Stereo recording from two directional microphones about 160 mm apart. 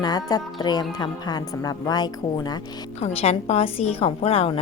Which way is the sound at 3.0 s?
40° left (ahead or behind).